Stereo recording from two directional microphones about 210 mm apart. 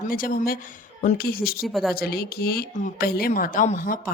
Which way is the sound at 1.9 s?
50° left (ahead or behind).